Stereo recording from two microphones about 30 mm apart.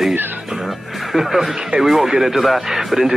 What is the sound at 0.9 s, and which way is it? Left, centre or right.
Speech, centre.